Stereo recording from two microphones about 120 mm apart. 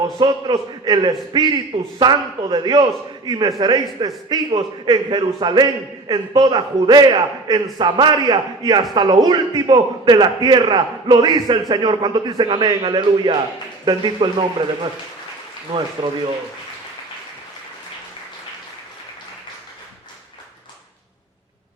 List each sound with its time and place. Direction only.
0.2 s a man's voice: 35° right (ahead or behind)